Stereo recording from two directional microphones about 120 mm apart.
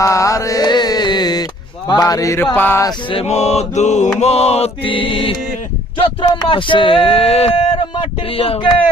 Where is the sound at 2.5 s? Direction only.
15° left (ahead or behind).